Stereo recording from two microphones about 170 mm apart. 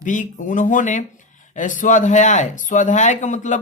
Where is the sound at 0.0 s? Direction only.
50° left (ahead or behind).